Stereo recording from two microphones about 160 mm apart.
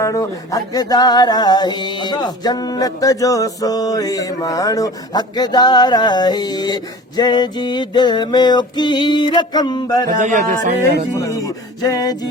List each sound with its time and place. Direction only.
0.0 s a sound: 20° left (ahead or behind)
10.1 s speech: 50° right (ahead or behind)
11.1 s music: 20° left (ahead or behind)